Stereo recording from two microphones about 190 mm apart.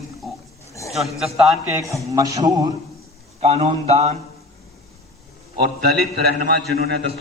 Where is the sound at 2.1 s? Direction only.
20° right (ahead or behind).